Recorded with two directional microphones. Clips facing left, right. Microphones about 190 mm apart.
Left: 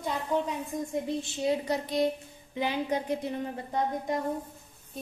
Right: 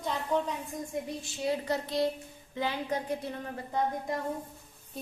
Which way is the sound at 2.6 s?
20° left (ahead or behind).